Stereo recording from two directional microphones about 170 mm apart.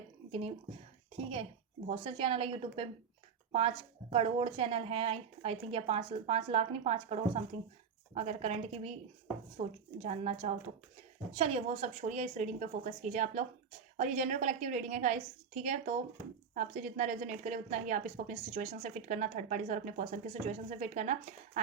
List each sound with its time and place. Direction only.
0.3 s a woman's voice: 35° right (ahead or behind)